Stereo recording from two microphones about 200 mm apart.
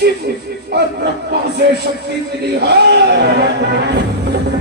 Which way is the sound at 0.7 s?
55° right (ahead or behind).